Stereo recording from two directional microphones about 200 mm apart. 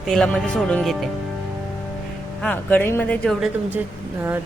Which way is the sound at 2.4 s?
10° left (ahead or behind).